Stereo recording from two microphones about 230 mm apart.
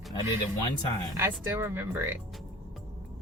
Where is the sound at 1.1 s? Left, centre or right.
Centre.